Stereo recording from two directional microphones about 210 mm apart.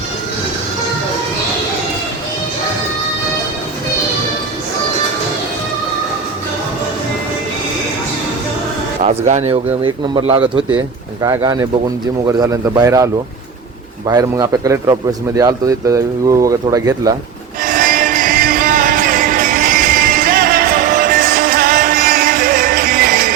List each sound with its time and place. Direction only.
9.0 s a man's voice: 35° right (ahead or behind); by 13.1 s 15° right (ahead or behind)
14.1 s speech: 20° right (ahead or behind)
17.6 s music: 40° right (ahead or behind)